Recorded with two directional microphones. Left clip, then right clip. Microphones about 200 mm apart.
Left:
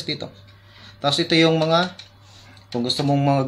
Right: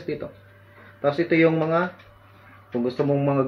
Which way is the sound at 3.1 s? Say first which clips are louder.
Left 4 dB; 60° left (ahead or behind).